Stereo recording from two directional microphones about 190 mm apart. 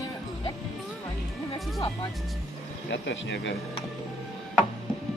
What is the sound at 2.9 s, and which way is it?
Speech, 70° left (ahead or behind).